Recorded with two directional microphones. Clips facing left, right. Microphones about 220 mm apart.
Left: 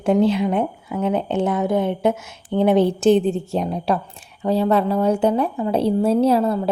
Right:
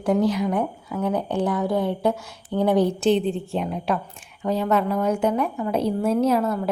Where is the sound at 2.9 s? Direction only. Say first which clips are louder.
Left 4 dB; 45° left (ahead or behind).